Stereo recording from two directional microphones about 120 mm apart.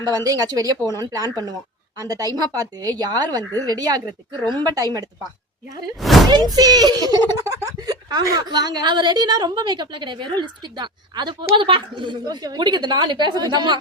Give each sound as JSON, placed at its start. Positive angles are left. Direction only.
{"t": 0.3, "sound": "a woman's voice", "side_deg": -30}
{"t": 0.8, "sound": "speech", "side_deg": 25}
{"t": 1.1, "sound": "a woman's voice", "side_deg": -30}
{"t": 6.0, "sound": "speech", "side_deg": 0}
{"t": 6.3, "sound": "a woman's voice", "side_deg": -35}